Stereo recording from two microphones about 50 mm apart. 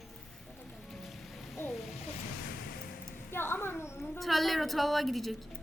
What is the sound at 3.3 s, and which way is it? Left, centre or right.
Speech, left.